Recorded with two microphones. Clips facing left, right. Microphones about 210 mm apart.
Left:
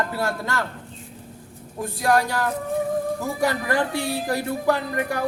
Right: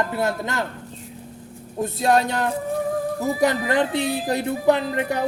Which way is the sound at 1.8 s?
25° right (ahead or behind).